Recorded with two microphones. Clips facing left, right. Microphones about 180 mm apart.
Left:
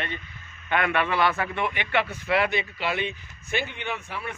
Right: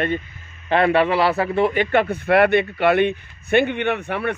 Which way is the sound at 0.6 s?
35° right (ahead or behind).